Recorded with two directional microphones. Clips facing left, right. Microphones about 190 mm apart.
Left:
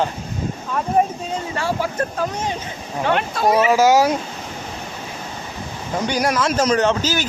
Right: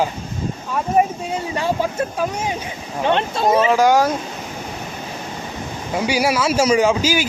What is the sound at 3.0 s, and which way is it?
Speech, 25° right (ahead or behind).